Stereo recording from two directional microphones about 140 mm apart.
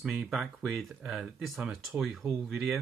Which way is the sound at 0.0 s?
5° right (ahead or behind).